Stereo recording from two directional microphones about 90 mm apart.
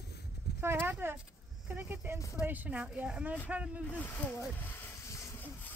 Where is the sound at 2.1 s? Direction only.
35° left (ahead or behind).